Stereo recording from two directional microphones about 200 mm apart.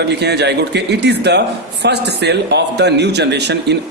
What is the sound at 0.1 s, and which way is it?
A man's voice, 55° right (ahead or behind).